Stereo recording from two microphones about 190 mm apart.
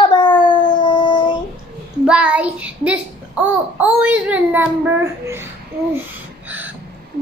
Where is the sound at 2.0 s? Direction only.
5° right (ahead or behind).